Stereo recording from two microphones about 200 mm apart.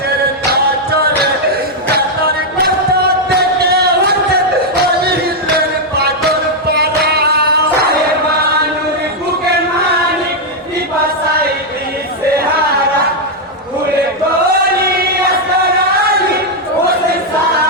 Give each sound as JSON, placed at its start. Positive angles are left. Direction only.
{"t": 0.5, "sound": "music", "side_deg": -50}
{"t": 3.3, "sound": "a sound", "side_deg": -55}
{"t": 4.7, "sound": "music", "side_deg": -55}